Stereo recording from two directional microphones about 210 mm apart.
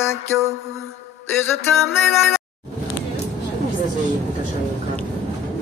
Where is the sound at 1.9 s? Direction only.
10° left (ahead or behind).